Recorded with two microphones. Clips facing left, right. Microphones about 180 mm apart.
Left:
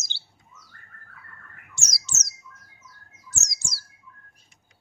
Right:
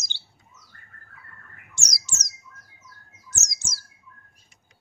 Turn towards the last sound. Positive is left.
turn(degrees=-20)  # may be behind; listen again after turning